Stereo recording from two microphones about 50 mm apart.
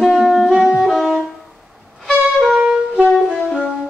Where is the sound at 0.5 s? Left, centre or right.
Centre.